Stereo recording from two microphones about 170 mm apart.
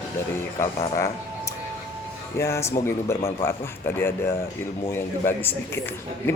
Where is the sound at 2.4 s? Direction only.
15° left (ahead or behind).